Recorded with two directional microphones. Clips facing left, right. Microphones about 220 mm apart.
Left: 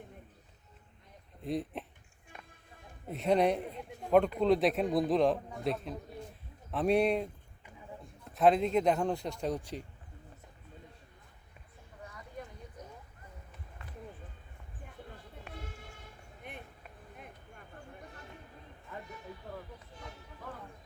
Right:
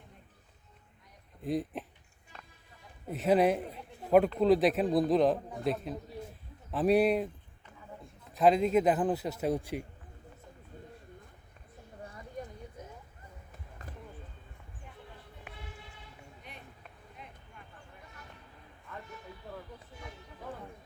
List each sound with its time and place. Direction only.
1.4 s speech: centre (ahead or behind)
3.1 s a man's voice: centre (ahead or behind)
12.0 s a sound: 35° right (ahead or behind)
15.5 s vehicle: 45° left (ahead or behind)